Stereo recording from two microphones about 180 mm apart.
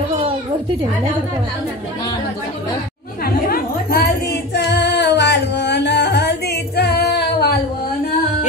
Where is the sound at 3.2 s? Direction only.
60° left (ahead or behind).